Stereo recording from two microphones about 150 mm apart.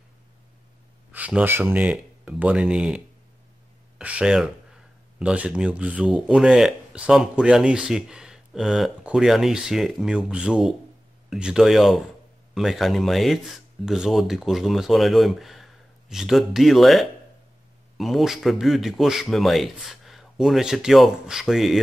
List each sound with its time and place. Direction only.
1.1 s speech: 10° right (ahead or behind)
4.0 s speech: 5° right (ahead or behind)